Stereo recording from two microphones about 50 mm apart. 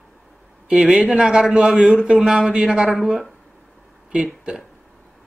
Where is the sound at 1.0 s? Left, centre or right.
Centre.